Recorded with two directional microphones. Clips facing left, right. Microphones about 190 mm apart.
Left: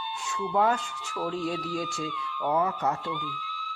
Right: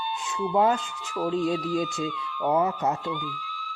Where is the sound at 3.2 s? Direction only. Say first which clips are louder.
Right 2 dB; 45° right (ahead or behind).